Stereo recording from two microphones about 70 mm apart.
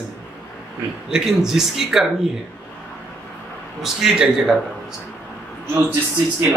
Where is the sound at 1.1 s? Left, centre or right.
Centre.